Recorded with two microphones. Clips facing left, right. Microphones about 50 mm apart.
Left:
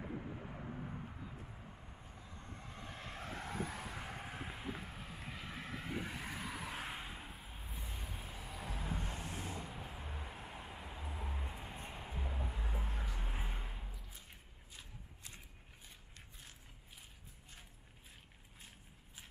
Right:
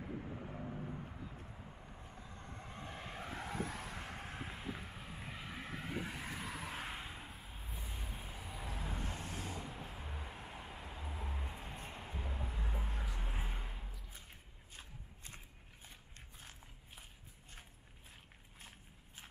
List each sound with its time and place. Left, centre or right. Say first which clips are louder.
0.0 s vehicle: even; centre
14.8 s shuffling cards: right 1 dB; right